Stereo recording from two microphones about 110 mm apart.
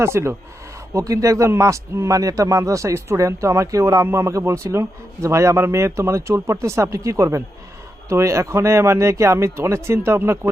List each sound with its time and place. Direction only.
0.0 s a man's voice: 25° right (ahead or behind)